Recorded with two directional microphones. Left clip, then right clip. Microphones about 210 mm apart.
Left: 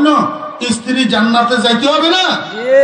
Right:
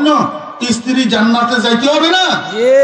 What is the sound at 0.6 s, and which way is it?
A man's voice, 55° left (ahead or behind).